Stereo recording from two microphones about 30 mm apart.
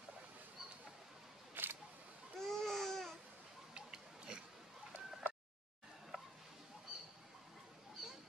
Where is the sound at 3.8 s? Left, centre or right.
Right.